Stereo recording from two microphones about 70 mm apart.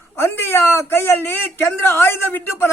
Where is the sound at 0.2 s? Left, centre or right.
Left.